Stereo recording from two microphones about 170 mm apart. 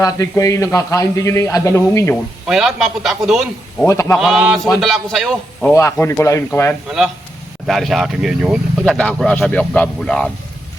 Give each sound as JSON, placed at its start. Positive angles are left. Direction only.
{"t": 0.0, "sound": "a man's voice", "side_deg": 20}
{"t": 2.5, "sound": "speech", "side_deg": 0}
{"t": 3.8, "sound": "a man's voice", "side_deg": 20}
{"t": 4.2, "sound": "speech", "side_deg": 0}
{"t": 5.7, "sound": "a man's voice", "side_deg": 15}
{"t": 6.8, "sound": "speech", "side_deg": 0}